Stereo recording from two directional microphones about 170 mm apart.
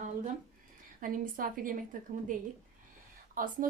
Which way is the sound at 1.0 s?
55° right (ahead or behind).